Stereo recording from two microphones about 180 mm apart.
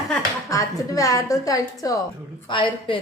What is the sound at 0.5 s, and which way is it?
A woman's voice, 20° left (ahead or behind).